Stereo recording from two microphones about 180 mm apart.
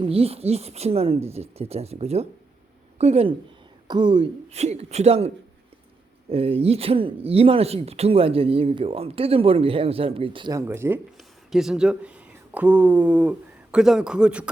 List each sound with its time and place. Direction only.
0.0 s speech: 35° right (ahead or behind)
10.7 s speech: 10° right (ahead or behind)